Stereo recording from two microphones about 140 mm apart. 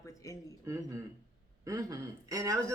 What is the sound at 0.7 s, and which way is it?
Speech, 20° right (ahead or behind).